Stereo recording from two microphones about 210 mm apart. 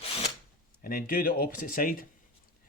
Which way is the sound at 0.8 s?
45° left (ahead or behind).